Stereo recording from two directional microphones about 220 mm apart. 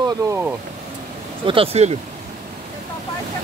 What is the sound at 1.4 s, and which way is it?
Speech, 25° right (ahead or behind).